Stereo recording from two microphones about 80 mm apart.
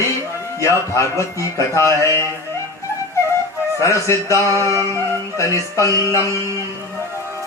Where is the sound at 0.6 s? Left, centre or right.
Left.